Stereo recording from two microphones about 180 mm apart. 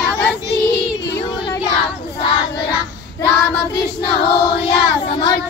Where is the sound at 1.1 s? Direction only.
25° left (ahead or behind).